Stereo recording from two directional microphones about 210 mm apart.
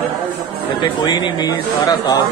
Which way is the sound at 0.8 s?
20° left (ahead or behind).